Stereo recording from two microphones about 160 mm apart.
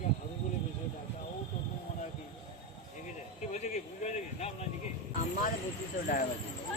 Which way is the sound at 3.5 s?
50° left (ahead or behind).